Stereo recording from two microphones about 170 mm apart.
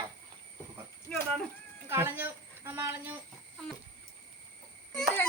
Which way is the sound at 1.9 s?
15° right (ahead or behind).